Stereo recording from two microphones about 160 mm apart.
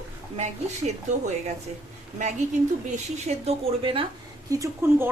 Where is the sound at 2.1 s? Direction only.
45° right (ahead or behind).